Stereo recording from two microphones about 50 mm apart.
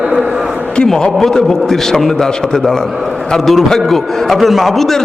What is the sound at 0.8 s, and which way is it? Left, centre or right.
A man's voice, centre.